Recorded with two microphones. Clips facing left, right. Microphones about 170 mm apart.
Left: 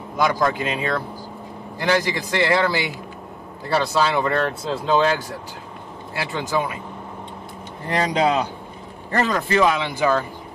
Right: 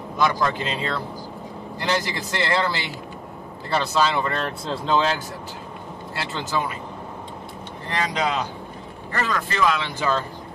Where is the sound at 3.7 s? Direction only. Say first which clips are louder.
Left 2 dB; 15° left (ahead or behind).